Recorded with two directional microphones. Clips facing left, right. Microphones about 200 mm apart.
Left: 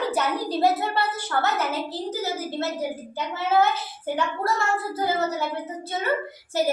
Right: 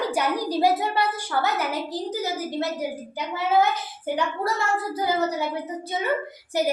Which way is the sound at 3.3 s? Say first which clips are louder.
Even; 15° right (ahead or behind).